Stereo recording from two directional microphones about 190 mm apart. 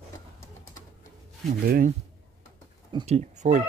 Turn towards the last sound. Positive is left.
turn(degrees=-40)  # may be behind; listen again after turning